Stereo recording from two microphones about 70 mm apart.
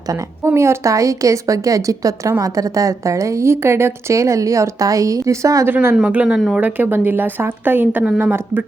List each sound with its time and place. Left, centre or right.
0.5 s a woman's voice: right
5.6 s a woman's voice: right
6.2 s speech: centre
6.6 s a woman's voice: right